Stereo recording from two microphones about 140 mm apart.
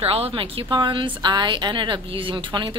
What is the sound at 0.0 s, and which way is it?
A woman's voice, 45° right (ahead or behind).